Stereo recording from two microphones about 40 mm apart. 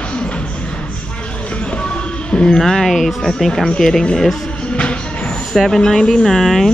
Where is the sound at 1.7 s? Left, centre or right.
Left.